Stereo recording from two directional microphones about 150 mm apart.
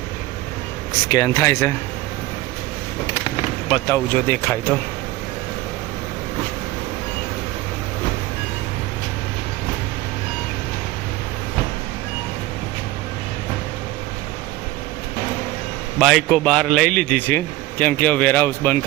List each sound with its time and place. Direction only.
1.0 s speech: 25° left (ahead or behind)
3.8 s speech: 15° left (ahead or behind)
16.0 s speech: centre (ahead or behind)